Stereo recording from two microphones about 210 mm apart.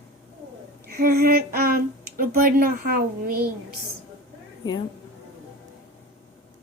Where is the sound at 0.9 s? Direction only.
45° right (ahead or behind).